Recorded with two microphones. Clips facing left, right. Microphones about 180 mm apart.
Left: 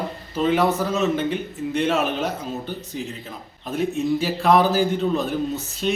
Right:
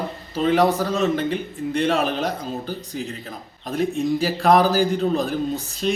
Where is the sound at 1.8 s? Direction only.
35° right (ahead or behind).